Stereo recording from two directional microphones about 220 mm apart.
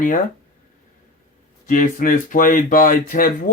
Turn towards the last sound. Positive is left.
turn(degrees=35)  # may be behind; listen again after turning